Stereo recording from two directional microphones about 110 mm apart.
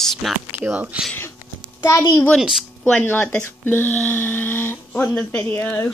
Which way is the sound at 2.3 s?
Centre (ahead or behind).